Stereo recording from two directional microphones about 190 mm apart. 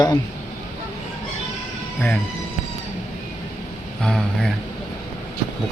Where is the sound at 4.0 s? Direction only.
5° left (ahead or behind).